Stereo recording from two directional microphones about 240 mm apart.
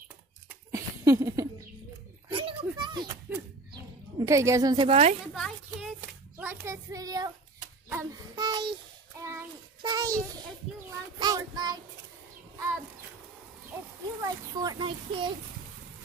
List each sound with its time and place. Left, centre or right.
0.7 s a sound: centre
4.3 s a child's voice: centre
5.3 s child singing: centre
7.9 s speech: centre
9.2 s child singing: centre
11.1 s child singing: centre
14.2 s a child's voice: centre